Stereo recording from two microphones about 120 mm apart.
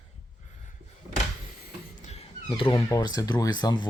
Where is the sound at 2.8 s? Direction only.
30° left (ahead or behind).